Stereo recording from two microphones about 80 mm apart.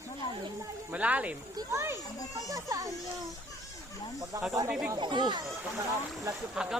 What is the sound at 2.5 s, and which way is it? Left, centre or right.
Speech, right.